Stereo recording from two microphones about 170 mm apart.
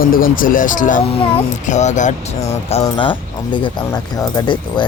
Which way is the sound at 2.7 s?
35° left (ahead or behind).